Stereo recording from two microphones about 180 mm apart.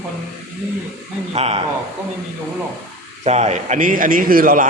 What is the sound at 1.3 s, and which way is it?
Speech, 35° right (ahead or behind).